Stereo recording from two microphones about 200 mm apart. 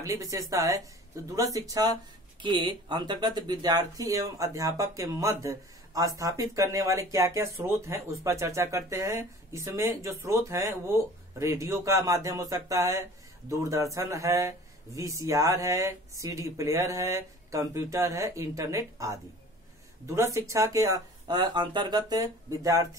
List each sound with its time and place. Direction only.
0.0 s speech: 15° right (ahead or behind)
20.2 s speech: 15° right (ahead or behind)